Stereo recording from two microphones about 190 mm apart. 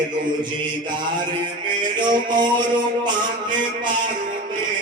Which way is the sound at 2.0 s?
25° right (ahead or behind).